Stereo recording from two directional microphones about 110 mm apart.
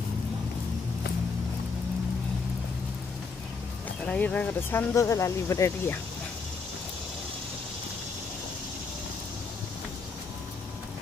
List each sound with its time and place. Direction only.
4.0 s speech: 10° left (ahead or behind); by 5.9 s 25° left (ahead or behind)